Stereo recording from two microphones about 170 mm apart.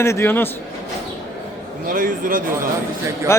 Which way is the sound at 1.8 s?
50° right (ahead or behind).